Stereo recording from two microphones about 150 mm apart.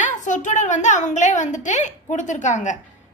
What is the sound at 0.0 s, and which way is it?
A woman's voice, 55° left (ahead or behind).